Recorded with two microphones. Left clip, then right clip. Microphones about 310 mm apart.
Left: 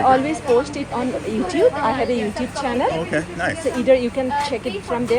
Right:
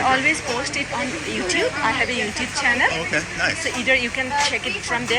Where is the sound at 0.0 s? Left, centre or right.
Centre.